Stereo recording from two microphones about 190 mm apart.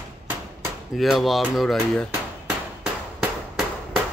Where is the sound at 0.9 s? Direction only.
Centre (ahead or behind).